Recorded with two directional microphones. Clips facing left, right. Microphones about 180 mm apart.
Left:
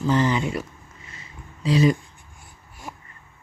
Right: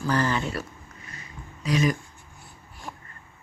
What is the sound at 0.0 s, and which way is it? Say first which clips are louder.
Mantra: left 4 dB; 20° left (ahead or behind).